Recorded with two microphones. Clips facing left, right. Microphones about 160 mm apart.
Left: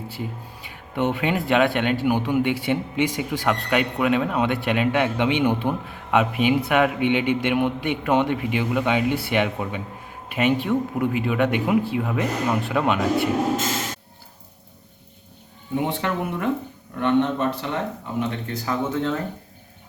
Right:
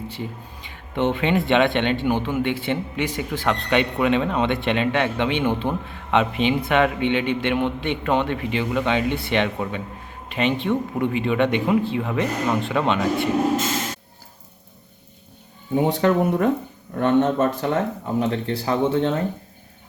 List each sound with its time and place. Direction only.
0.1 s speech: 10° left (ahead or behind)
15.7 s speech: 40° right (ahead or behind)
18.2 s speech: 35° right (ahead or behind)